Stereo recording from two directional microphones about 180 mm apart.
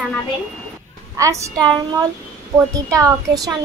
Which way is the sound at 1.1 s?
20° right (ahead or behind).